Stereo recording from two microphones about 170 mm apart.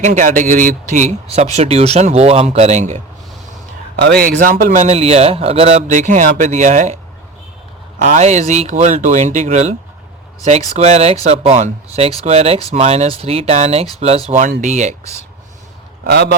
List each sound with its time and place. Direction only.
0.0 s a man's voice: 45° right (ahead or behind)
3.9 s speech: 70° right (ahead or behind)
4.4 s a man's voice: 50° right (ahead or behind)
8.0 s a man's voice: 45° right (ahead or behind)
10.8 s a man's voice: 40° right (ahead or behind)
16.0 s a man's voice: 75° right (ahead or behind)